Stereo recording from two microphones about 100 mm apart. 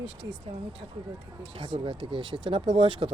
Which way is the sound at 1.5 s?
65° right (ahead or behind).